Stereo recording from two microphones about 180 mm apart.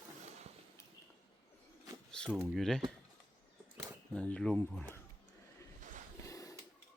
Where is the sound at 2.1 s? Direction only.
5° left (ahead or behind).